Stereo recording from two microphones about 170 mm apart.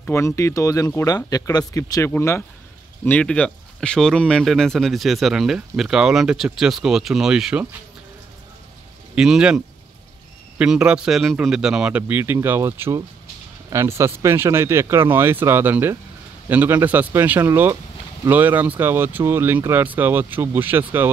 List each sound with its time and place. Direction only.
0.0 s speech: 15° left (ahead or behind); by 7.6 s 5° right (ahead or behind)
9.1 s speech: 5° right (ahead or behind)
10.6 s speech: 5° right (ahead or behind)